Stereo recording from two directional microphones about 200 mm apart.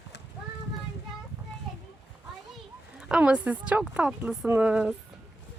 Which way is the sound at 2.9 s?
5° right (ahead or behind).